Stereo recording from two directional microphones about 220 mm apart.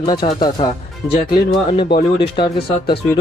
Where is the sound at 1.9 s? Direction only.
50° left (ahead or behind).